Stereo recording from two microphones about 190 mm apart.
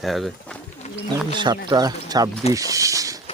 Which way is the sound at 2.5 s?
15° right (ahead or behind).